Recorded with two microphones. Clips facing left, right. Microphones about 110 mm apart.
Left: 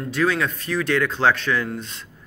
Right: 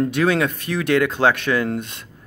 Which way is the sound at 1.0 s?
15° right (ahead or behind).